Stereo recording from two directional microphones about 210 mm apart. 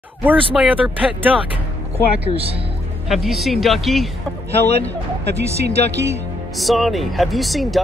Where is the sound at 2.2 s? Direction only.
25° right (ahead or behind).